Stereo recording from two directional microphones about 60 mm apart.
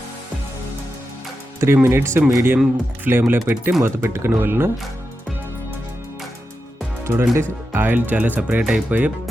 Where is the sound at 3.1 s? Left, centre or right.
Right.